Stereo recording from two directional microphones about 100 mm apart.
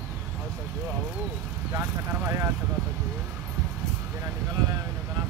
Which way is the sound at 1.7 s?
25° right (ahead or behind).